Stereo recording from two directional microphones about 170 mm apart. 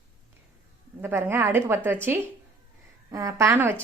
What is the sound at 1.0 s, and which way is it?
A woman's voice, 15° right (ahead or behind).